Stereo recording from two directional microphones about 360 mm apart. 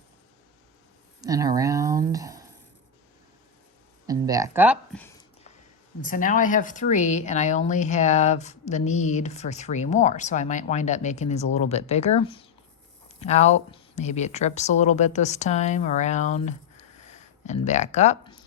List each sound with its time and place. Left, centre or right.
1.2 s a sound: centre
4.0 s speech: centre
6.1 s speech: left